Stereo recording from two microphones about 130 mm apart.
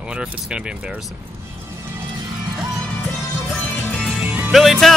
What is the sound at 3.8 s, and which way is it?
Music, 10° left (ahead or behind).